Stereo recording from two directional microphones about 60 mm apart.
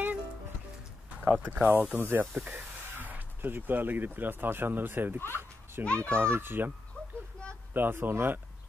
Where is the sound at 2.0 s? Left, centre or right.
Right.